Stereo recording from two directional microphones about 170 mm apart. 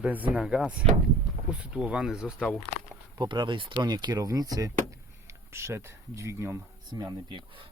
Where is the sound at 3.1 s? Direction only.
25° right (ahead or behind).